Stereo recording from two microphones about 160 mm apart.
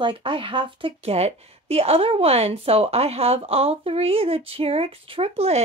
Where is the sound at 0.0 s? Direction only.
30° right (ahead or behind).